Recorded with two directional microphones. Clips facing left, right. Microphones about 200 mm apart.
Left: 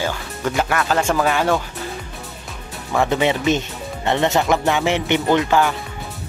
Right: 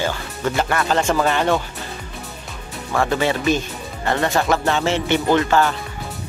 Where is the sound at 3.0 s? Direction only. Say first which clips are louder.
Left 1 dB; 20° left (ahead or behind).